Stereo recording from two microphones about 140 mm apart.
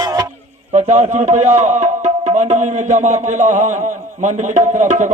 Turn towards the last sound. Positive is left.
turn(degrees=-60)  # may be behind; listen again after turning